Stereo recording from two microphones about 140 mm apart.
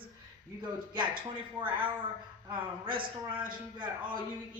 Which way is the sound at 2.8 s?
35° right (ahead or behind).